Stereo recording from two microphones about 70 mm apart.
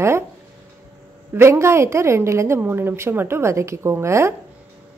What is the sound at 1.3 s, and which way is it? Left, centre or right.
A woman's voice, right.